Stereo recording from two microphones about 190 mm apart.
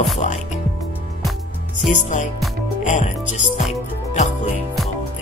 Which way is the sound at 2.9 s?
40° left (ahead or behind).